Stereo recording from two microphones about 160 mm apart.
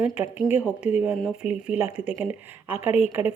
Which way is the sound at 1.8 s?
45° left (ahead or behind).